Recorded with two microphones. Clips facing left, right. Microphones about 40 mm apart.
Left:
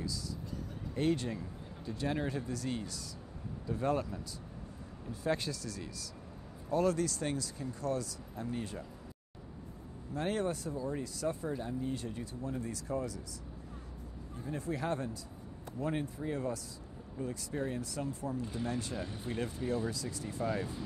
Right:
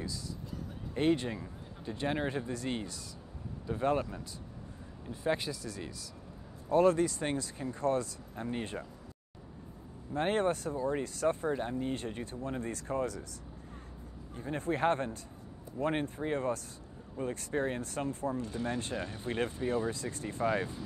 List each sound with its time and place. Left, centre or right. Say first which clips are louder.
0.9 s speech: right 3 dB; right
10.1 s speech: right 4 dB; right
14.3 s speech: right 4 dB; right